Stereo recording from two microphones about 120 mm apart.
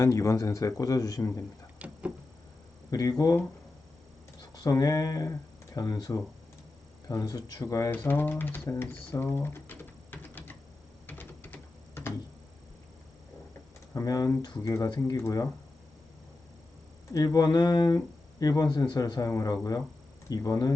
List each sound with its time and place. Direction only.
0.0 s a man's voice: 25° left (ahead or behind)
1.8 s a sound: 10° right (ahead or behind)
2.9 s a man's voice: 30° left (ahead or behind)
4.5 s speech: 35° left (ahead or behind)
7.1 s speech: 30° left (ahead or behind)
7.6 s a man's voice: 20° left (ahead or behind)
11.0 s typing: 15° left (ahead or behind)
13.9 s speech: 30° left (ahead or behind)
15.1 s a man's voice: 25° left (ahead or behind)
17.1 s speech: 30° left (ahead or behind)